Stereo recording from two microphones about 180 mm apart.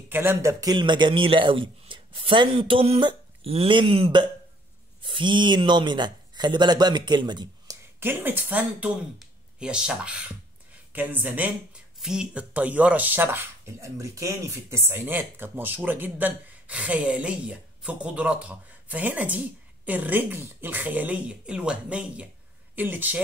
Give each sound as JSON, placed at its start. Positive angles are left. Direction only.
{"t": 0.1, "sound": "a man's voice", "side_deg": -15}
{"t": 8.0, "sound": "speech", "side_deg": -10}